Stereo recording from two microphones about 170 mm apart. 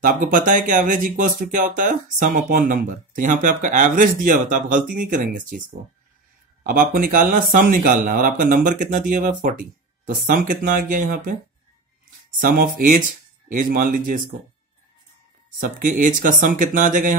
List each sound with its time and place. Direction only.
0.0 s speech: 55° right (ahead or behind)
6.6 s speech: 55° right (ahead or behind)
12.4 s speech: 55° right (ahead or behind)
15.6 s speech: 55° right (ahead or behind)